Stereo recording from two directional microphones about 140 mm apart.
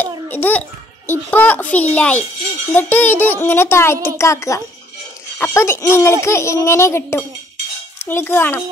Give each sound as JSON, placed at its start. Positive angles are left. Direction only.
{"t": 0.0, "sound": "a child's voice", "side_deg": 10}